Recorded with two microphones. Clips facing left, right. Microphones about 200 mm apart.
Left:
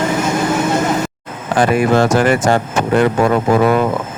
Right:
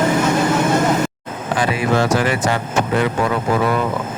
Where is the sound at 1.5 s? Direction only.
50° left (ahead or behind).